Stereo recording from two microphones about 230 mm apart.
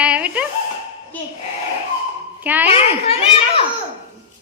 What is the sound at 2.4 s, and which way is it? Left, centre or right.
Speech, centre.